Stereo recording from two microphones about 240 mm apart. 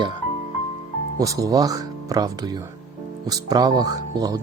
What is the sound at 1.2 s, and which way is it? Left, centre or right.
A man's voice, centre.